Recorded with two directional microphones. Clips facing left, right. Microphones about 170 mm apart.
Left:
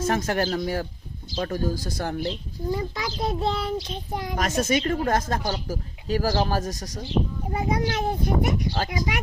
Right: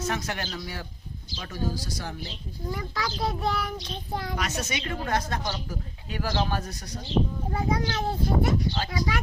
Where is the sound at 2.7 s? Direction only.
20° left (ahead or behind).